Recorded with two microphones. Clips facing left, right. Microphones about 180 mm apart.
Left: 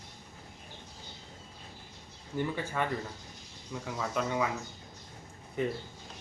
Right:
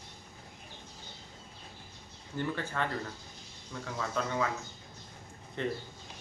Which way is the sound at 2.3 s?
10° left (ahead or behind).